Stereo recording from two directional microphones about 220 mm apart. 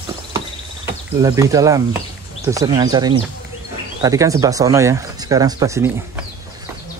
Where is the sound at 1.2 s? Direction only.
15° right (ahead or behind).